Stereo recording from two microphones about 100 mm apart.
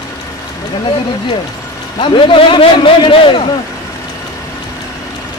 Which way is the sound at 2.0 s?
60° left (ahead or behind).